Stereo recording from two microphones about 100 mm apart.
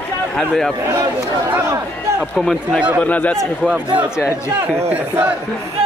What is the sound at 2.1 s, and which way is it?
Speech, centre (ahead or behind).